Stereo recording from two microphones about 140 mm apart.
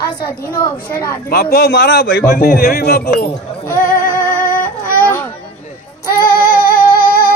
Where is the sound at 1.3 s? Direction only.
90° left.